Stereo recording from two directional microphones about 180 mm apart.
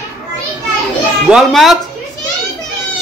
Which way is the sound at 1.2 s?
Centre (ahead or behind).